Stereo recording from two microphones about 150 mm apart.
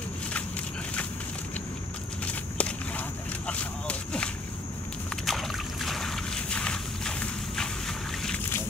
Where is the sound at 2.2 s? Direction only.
10° left (ahead or behind).